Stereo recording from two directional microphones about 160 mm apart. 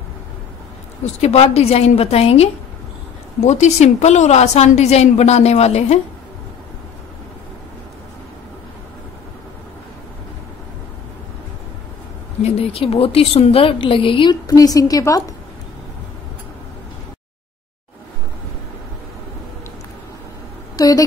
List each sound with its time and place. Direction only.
1.0 s a woman's voice: 40° left (ahead or behind)
12.4 s a woman's voice: 40° left (ahead or behind)
14.5 s a woman's voice: 20° left (ahead or behind)
20.7 s a sound: 20° left (ahead or behind)